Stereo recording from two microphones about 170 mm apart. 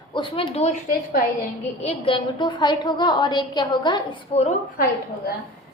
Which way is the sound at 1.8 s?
30° left (ahead or behind).